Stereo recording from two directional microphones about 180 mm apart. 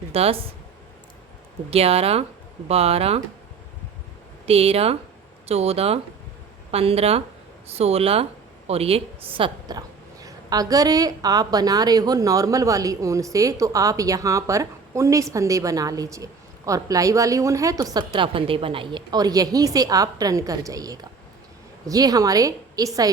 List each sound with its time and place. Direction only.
0.1 s speech: 35° right (ahead or behind)
1.7 s speech: 35° right (ahead or behind)
4.4 s a woman's voice: 35° right (ahead or behind)